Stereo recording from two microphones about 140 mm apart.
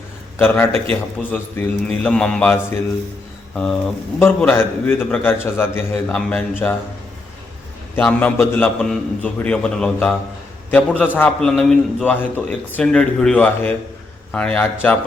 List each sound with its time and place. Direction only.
0.3 s a man's voice: 15° left (ahead or behind)
7.9 s a man's voice: 10° left (ahead or behind)